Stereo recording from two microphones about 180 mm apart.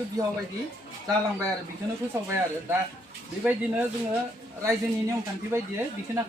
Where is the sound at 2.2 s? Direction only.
15° right (ahead or behind).